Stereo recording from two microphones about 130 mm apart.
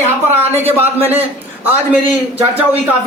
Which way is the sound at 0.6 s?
15° right (ahead or behind).